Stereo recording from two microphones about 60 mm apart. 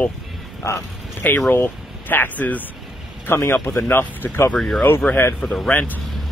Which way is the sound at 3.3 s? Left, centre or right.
Left.